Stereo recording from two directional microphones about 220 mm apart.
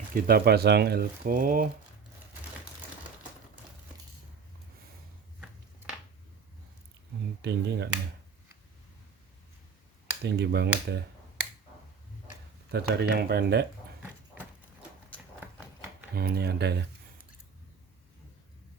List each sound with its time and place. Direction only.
0.1 s speech: 40° right (ahead or behind)
7.4 s speech: 50° right (ahead or behind)
10.2 s speech: 50° right (ahead or behind)
12.7 s speech: 45° right (ahead or behind)
16.1 s speech: 45° right (ahead or behind)